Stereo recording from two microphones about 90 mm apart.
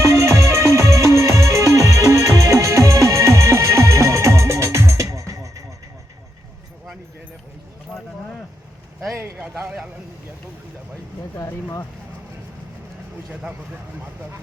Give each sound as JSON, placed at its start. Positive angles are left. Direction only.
{"t": 0.0, "sound": "music", "side_deg": -30}
{"t": 9.4, "sound": "a man's voice", "side_deg": -20}
{"t": 11.3, "sound": "speech", "side_deg": 30}